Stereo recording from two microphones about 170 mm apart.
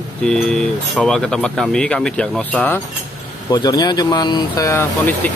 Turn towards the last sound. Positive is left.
turn(degrees=15)  # may be behind; listen again after turning